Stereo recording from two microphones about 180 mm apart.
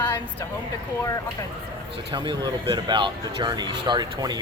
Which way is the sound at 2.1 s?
25° right (ahead or behind).